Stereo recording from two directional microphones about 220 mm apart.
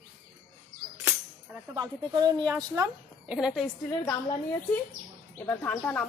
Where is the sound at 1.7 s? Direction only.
20° right (ahead or behind).